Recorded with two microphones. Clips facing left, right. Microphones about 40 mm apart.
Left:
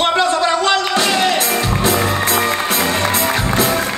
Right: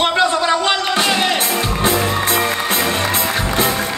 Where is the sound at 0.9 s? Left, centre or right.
Right.